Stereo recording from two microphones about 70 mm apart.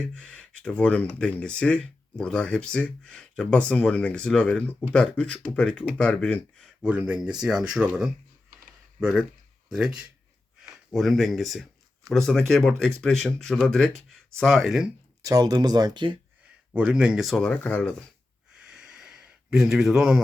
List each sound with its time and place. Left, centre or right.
0.0 s speech: centre
6.8 s speech: centre
10.6 s speech: centre
15.2 s speech: right
16.7 s speech: centre
17.3 s speech: centre
17.6 s speech: left
18.6 s a sound: centre